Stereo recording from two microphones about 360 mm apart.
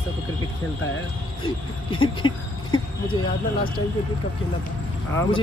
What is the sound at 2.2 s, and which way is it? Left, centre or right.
Speech, centre.